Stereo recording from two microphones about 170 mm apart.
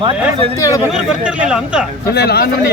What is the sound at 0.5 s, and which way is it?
Speech, 20° left (ahead or behind).